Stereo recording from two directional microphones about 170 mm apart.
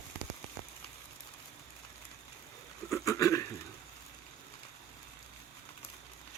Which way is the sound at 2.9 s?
20° left (ahead or behind).